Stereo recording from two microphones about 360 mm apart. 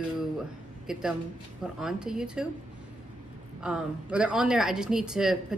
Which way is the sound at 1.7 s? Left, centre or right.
Centre.